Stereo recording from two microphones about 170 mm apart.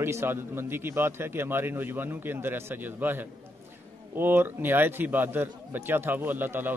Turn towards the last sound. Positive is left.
turn(degrees=-10)  # may be behind; listen again after turning